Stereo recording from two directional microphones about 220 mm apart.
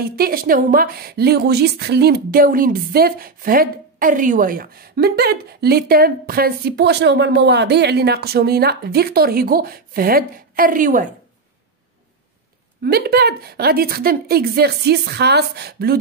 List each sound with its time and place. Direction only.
0.0 s a woman's voice: 45° right (ahead or behind)
12.8 s a woman's voice: 45° right (ahead or behind)